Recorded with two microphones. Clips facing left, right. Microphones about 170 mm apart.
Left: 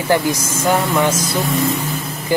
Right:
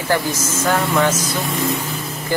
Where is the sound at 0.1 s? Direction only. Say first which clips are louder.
Left 3 dB; 15° left (ahead or behind).